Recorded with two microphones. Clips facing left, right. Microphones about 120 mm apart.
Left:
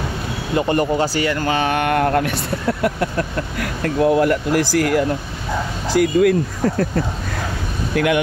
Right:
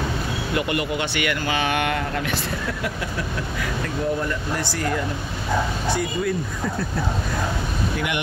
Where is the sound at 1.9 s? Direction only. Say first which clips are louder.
Left 8 dB; 55° left (ahead or behind).